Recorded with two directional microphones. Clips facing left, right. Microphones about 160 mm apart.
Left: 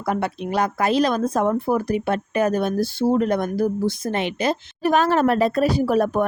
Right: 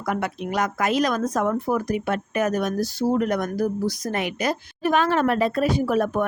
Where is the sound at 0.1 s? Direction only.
30° left (ahead or behind).